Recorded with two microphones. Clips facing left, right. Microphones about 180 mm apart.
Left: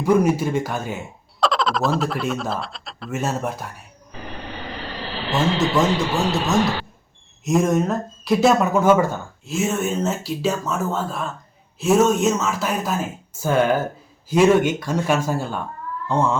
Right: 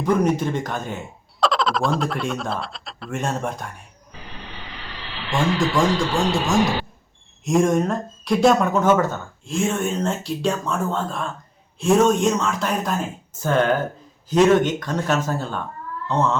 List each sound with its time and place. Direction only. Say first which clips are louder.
0.0 s speech: left 2 dB; 10° left (ahead or behind)
4.7 s vehicle: left 7 dB; 40° left (ahead or behind)
5.3 s speech: left 1 dB; 25° left (ahead or behind)
6.1 s speech: right 1 dB; centre (ahead or behind)